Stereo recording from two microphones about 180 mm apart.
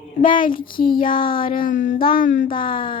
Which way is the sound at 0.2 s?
50° left (ahead or behind).